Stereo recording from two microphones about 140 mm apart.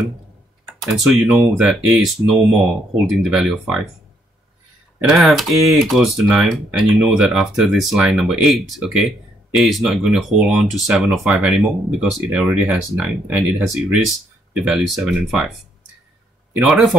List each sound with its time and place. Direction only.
0.9 s speech: centre (ahead or behind)
5.1 s speech: centre (ahead or behind)
16.5 s speech: 5° right (ahead or behind)